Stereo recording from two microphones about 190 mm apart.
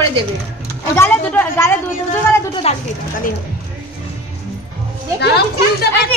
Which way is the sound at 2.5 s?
30° left (ahead or behind).